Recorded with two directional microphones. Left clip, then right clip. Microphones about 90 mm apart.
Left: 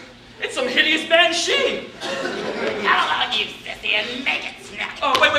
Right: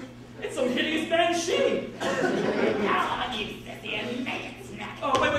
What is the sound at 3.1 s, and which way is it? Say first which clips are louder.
A woman's voice: left 9 dB; 35° left (ahead or behind).